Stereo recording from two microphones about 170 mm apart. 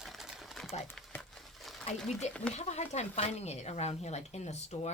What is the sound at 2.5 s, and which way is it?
Speech, 40° left (ahead or behind).